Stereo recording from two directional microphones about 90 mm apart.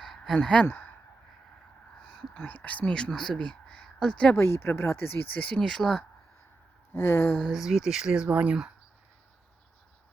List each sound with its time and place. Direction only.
0.0 s a sound: 5° left (ahead or behind)
0.3 s speech: 15° left (ahead or behind)
2.0 s speech: 10° left (ahead or behind)
4.4 s speech: 25° left (ahead or behind)
5.6 s speech: 5° left (ahead or behind)
6.9 s speech: 30° left (ahead or behind)
7.3 s speech: centre (ahead or behind)